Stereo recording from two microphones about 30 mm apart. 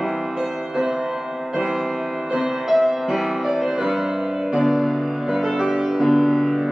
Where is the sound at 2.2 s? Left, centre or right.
Right.